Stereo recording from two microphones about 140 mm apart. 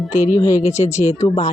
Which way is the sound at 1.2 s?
35° left (ahead or behind).